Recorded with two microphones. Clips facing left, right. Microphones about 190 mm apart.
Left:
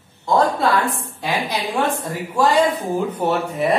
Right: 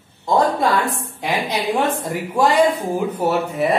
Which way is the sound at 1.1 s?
20° right (ahead or behind).